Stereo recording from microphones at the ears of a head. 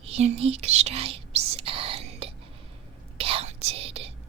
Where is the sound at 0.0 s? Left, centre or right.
Right.